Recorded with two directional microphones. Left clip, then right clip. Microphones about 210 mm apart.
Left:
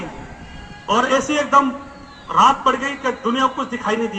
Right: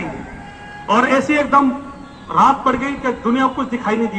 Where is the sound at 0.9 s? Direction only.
35° left (ahead or behind).